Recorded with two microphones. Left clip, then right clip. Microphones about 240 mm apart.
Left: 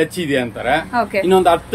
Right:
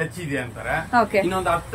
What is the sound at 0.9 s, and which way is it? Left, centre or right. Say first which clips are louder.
Speech: left 1 dB; centre.